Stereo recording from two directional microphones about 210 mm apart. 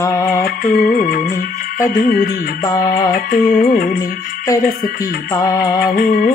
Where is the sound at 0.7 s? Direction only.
45° left (ahead or behind).